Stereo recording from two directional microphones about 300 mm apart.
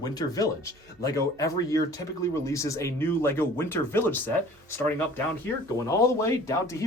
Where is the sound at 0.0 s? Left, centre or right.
Centre.